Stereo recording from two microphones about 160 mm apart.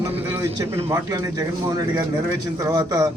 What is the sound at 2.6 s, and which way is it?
Speech, 25° right (ahead or behind).